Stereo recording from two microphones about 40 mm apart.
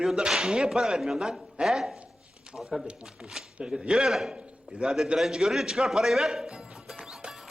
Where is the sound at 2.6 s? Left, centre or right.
Centre.